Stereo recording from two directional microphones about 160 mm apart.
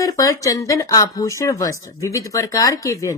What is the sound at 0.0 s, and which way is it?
Speech, 20° left (ahead or behind).